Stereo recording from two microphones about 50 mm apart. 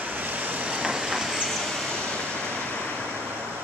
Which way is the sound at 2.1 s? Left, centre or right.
Centre.